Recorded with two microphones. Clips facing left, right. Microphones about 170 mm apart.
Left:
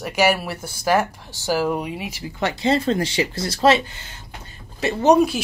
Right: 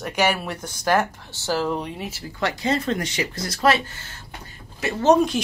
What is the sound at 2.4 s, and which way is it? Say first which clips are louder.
Speech: left 3 dB; 25° left (ahead or behind).